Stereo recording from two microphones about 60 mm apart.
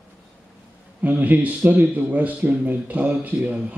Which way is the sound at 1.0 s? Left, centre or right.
Right.